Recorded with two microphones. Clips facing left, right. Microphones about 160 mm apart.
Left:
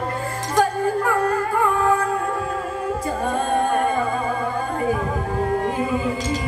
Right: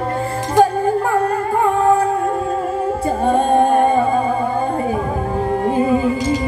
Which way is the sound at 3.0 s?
30° right (ahead or behind).